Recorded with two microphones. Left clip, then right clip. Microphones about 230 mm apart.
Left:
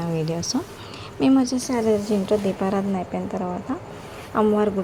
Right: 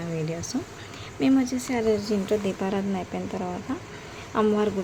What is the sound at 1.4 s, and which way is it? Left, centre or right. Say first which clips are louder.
Speech: left 4 dB; centre.